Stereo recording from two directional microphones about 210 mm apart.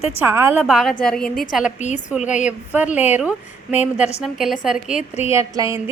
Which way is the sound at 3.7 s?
30° left (ahead or behind).